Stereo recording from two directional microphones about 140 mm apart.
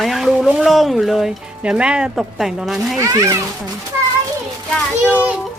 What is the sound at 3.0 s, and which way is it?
Speech, 25° right (ahead or behind).